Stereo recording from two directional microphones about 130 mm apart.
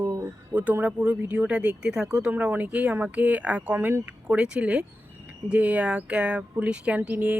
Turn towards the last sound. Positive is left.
turn(degrees=-10)  # may be behind; listen again after turning